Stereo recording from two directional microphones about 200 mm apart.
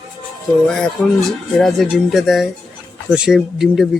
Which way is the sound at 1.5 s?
Centre (ahead or behind).